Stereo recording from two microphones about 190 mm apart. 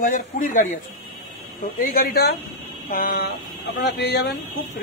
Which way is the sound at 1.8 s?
50° left (ahead or behind).